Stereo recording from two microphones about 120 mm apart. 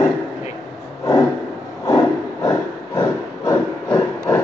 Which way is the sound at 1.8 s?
30° left (ahead or behind).